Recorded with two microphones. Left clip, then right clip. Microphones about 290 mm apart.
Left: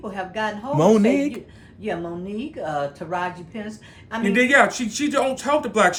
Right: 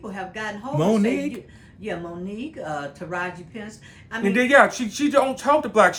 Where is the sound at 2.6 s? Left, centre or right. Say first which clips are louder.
Left 5 dB; left.